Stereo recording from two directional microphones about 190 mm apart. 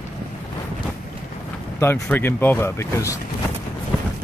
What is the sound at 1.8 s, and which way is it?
Speech, 10° left (ahead or behind).